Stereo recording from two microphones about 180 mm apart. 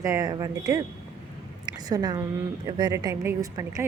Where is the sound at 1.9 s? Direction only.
20° right (ahead or behind).